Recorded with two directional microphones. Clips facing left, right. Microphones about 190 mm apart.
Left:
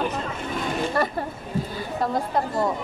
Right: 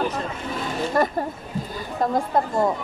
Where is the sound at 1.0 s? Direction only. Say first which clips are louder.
Right 4 dB; 40° right (ahead or behind).